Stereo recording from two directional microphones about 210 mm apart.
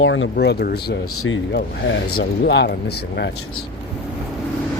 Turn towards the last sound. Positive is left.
turn(degrees=50)  # may be behind; listen again after turning